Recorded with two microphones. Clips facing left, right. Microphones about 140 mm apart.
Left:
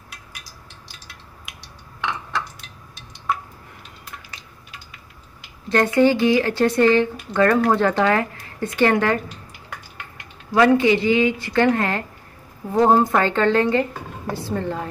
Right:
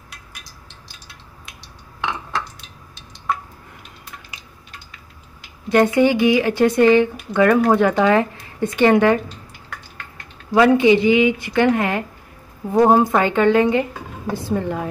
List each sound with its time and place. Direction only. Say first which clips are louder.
5.7 s speech: right 2 dB; 15° right (ahead or behind)
10.5 s speech: right 2 dB; 20° right (ahead or behind)